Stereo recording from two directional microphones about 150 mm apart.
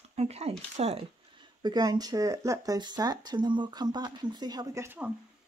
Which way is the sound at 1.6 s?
25° right (ahead or behind).